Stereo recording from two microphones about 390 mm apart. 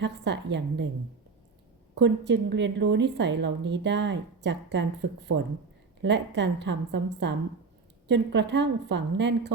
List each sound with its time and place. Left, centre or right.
0.0 s a woman's voice: right
2.0 s a woman's voice: right